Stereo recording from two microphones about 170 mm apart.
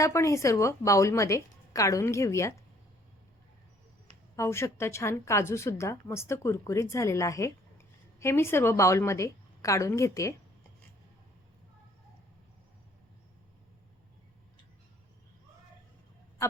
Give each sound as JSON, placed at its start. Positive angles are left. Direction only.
{"t": 0.0, "sound": "a woman's voice", "side_deg": 15}
{"t": 4.4, "sound": "a woman's voice", "side_deg": 15}